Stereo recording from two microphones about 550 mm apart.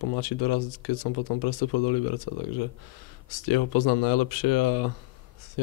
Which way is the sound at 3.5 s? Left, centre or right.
Left.